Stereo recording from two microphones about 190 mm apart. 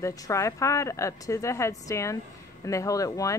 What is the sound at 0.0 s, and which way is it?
A woman's voice, 15° left (ahead or behind).